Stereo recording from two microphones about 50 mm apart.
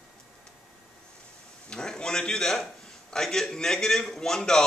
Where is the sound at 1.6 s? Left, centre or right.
Centre.